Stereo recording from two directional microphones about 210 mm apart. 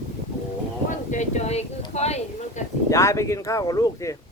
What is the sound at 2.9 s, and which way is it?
Speech, 15° left (ahead or behind).